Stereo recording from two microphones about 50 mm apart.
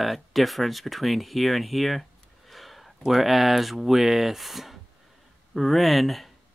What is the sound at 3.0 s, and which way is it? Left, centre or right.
Speech, centre.